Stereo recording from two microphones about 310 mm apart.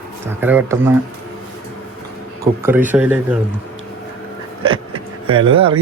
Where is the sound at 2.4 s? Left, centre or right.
Centre.